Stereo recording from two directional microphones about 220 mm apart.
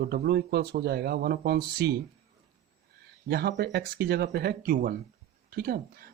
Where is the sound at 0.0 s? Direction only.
45° right (ahead or behind).